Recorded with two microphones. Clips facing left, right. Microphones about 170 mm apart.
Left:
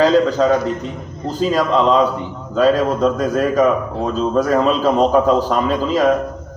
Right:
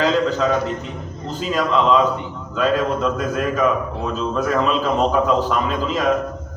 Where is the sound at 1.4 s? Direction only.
40° left (ahead or behind).